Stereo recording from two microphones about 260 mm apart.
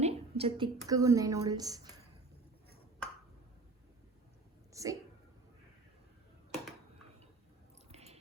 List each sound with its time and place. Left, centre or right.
0.0 s a woman's voice: right
4.7 s a sound: centre
7.9 s squish: right